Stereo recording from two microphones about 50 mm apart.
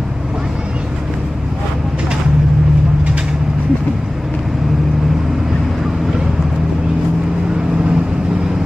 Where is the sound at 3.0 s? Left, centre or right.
Centre.